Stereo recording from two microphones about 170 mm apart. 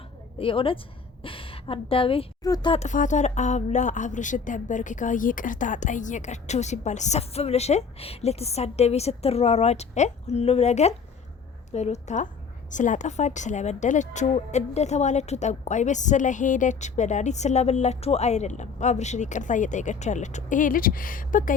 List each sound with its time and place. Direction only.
0.3 s a woman's voice: 30° left (ahead or behind)
2.7 s a woman's voice: 45° left (ahead or behind)